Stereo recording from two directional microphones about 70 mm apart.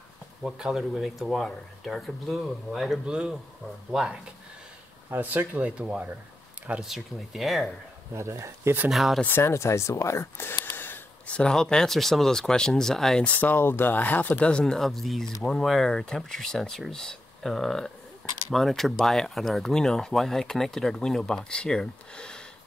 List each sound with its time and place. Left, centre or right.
0.4 s speech: centre
3.1 s speech: centre
5.1 s speech: right
6.9 s speech: centre
8.1 s speech: right
8.9 s speech: centre
9.2 s speech: left
10.6 s a sound: left
11.2 s speech: centre
13.2 s speech: left
14.6 s speech: centre